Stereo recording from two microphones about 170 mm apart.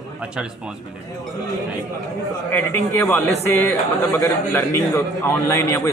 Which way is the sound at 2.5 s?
15° left (ahead or behind).